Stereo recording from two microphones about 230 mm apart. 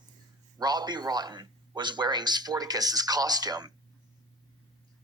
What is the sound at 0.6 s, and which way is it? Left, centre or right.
A man's voice, centre.